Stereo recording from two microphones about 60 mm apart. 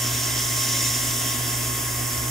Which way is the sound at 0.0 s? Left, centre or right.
Centre.